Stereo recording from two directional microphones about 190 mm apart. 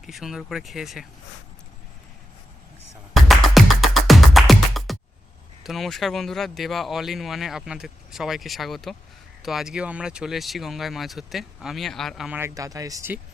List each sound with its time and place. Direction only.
0.0 s speech: centre (ahead or behind)
3.2 s music: centre (ahead or behind)
5.6 s speech: centre (ahead or behind)
12.4 s speech: 15° right (ahead or behind)